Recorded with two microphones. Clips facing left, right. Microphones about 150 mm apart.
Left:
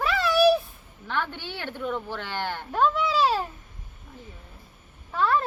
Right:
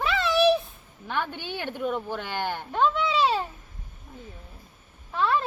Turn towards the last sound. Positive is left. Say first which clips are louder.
# left 1 dB
turn(degrees=0)  # may be behind; listen again after turning